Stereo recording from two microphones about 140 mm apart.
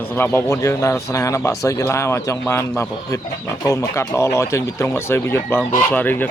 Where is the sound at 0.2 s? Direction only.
15° left (ahead or behind).